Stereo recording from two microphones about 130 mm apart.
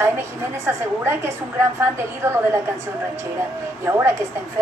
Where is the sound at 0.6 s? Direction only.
20° right (ahead or behind).